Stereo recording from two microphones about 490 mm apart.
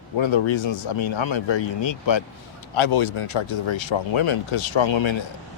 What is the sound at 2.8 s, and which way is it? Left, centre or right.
Speech, left.